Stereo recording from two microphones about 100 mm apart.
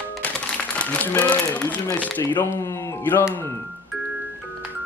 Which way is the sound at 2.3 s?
25° left (ahead or behind).